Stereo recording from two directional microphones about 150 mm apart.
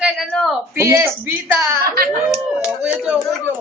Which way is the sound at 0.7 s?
15° right (ahead or behind).